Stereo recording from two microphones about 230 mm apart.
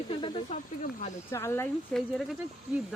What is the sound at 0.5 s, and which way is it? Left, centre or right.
Speech, left.